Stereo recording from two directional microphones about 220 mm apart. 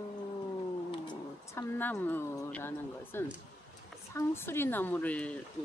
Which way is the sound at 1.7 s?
10° left (ahead or behind).